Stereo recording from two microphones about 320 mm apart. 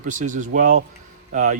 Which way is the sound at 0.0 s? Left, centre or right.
Right.